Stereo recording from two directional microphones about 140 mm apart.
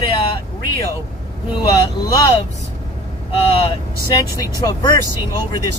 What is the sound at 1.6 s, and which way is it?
Speech, 25° left (ahead or behind).